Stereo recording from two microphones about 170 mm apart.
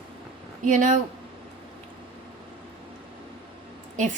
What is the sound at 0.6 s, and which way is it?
Speech, 45° right (ahead or behind).